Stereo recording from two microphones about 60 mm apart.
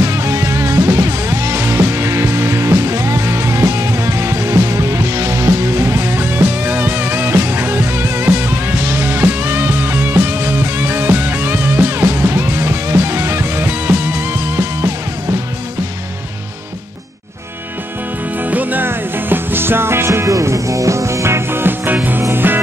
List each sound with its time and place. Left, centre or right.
0.0 s music: right
18.4 s music: right
20.1 s music: right